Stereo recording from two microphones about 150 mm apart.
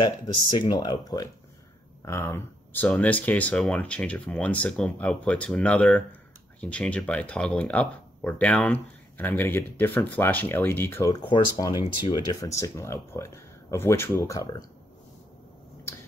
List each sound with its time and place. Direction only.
0.0 s speech: 30° left (ahead or behind)
2.0 s speech: 20° left (ahead or behind)